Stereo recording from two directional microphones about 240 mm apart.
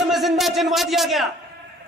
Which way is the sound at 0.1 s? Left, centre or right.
Centre.